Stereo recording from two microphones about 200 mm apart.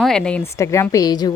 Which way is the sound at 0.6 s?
15° left (ahead or behind).